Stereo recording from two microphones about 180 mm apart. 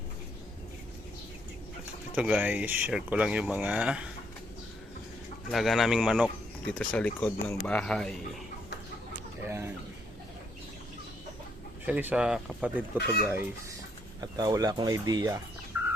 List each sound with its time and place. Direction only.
2.1 s speech: 10° right (ahead or behind)
5.5 s speech: centre (ahead or behind)
6.7 s speech: 10° left (ahead or behind)
9.5 s a sound: 10° right (ahead or behind)
11.9 s speech: 10° right (ahead or behind)
14.2 s speech: 20° right (ahead or behind)